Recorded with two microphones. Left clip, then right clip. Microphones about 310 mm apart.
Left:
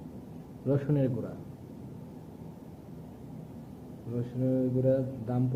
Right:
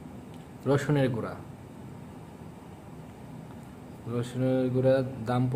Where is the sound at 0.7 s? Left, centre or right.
Right.